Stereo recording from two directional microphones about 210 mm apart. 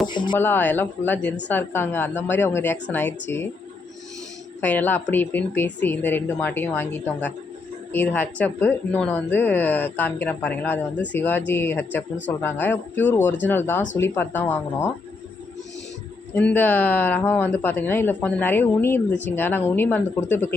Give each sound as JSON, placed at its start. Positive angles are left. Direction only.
{"t": 0.1, "sound": "speech", "side_deg": 20}
{"t": 0.3, "sound": "a woman's voice", "side_deg": 10}
{"t": 4.6, "sound": "a woman's voice", "side_deg": 10}
{"t": 16.3, "sound": "a woman's voice", "side_deg": 5}